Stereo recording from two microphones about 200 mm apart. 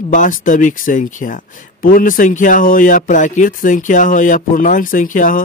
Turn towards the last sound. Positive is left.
turn(degrees=40)  # may be behind; listen again after turning